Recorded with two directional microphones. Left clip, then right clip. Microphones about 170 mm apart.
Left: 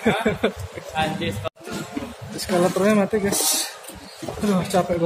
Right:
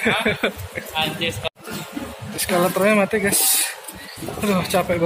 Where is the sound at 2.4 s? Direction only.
10° left (ahead or behind).